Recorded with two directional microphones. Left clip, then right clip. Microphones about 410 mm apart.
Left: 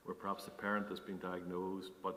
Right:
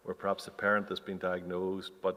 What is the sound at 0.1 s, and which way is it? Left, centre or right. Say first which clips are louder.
Speech: right 8 dB; right.